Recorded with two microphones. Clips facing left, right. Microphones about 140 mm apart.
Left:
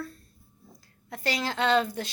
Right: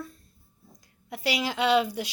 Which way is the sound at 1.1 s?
10° right (ahead or behind).